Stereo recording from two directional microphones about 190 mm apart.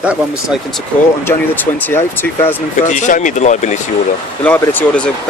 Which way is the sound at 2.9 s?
40° left (ahead or behind).